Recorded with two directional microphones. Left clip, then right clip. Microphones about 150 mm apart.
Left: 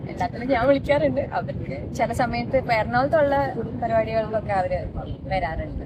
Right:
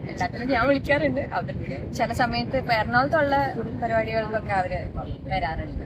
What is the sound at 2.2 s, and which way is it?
Speech, 40° left (ahead or behind).